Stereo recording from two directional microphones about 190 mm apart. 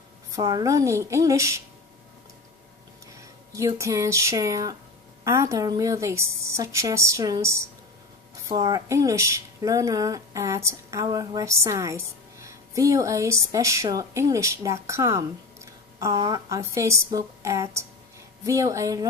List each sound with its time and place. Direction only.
0.3 s speech: 20° right (ahead or behind)
3.5 s speech: 15° right (ahead or behind)